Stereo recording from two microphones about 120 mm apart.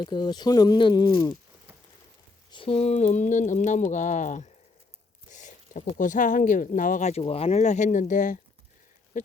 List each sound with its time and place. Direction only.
0.0 s speech: 40° left (ahead or behind)
2.5 s speech: 50° left (ahead or behind)
7.6 s speech: 90° left
9.1 s a sound: 90° left